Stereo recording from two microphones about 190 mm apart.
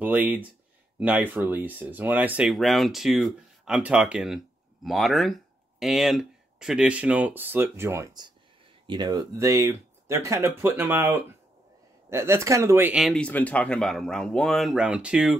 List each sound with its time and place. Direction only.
0.0 s speech: 10° right (ahead or behind)